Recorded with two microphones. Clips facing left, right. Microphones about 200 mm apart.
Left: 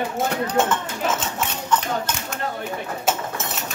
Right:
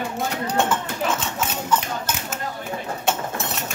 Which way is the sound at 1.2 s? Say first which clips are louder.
Even; 5° right (ahead or behind).